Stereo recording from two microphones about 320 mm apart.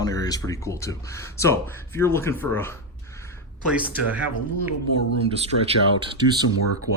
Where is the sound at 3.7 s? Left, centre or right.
Centre.